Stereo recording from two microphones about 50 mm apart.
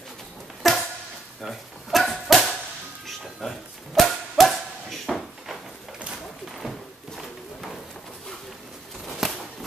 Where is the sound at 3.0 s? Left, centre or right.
Centre.